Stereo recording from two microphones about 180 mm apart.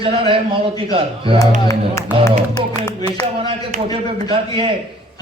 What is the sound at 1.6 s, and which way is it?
Speech, 15° left (ahead or behind).